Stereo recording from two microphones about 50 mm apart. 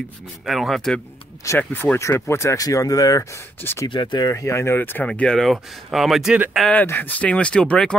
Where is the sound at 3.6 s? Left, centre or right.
Left.